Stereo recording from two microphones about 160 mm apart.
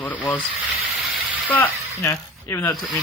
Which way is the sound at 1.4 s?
15° left (ahead or behind).